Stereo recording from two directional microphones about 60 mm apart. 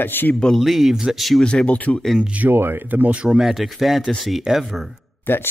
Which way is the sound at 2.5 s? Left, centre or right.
Right.